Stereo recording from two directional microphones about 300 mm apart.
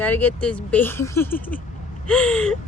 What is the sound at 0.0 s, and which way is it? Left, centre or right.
Speech, centre.